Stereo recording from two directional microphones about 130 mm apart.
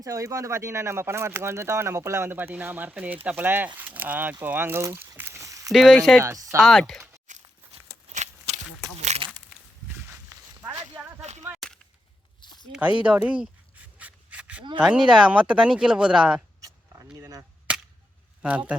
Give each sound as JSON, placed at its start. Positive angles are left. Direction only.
{"t": 0.0, "sound": "speech", "side_deg": -25}
{"t": 5.7, "sound": "speech", "side_deg": 0}
{"t": 6.2, "sound": "speech", "side_deg": -20}
{"t": 6.6, "sound": "speech", "side_deg": 0}
{"t": 7.3, "sound": "walk", "side_deg": -65}
{"t": 8.1, "sound": "a sound", "side_deg": -65}
{"t": 11.2, "sound": "a sound", "side_deg": -60}
{"t": 12.4, "sound": "a sound", "side_deg": 35}
{"t": 13.0, "sound": "speech", "side_deg": -10}
{"t": 14.0, "sound": "rub", "side_deg": -10}
{"t": 14.8, "sound": "speech", "side_deg": -5}
{"t": 16.6, "sound": "vehicle", "side_deg": -25}
{"t": 17.7, "sound": "a sound", "side_deg": -10}
{"t": 18.4, "sound": "speech", "side_deg": -10}